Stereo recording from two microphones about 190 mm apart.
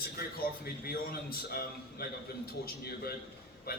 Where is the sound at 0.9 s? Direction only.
55° left (ahead or behind).